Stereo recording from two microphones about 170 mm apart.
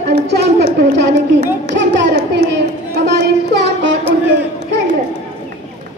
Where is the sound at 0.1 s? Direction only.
80° right.